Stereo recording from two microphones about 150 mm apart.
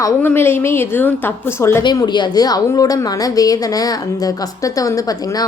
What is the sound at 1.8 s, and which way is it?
A woman's voice, 30° left (ahead or behind).